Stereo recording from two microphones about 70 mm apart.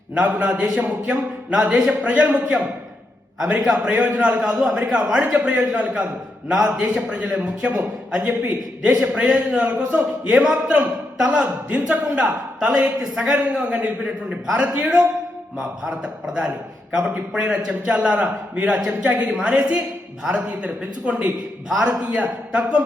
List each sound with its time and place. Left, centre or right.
0.1 s a man's voice: centre
9.0 s speech: centre